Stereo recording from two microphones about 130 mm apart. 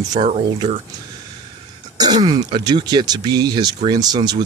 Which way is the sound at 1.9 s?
30° right (ahead or behind).